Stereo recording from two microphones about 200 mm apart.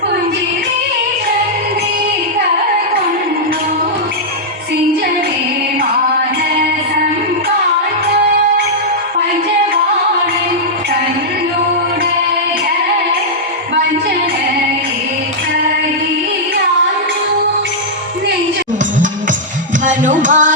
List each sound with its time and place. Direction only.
19.8 s music: 40° right (ahead or behind)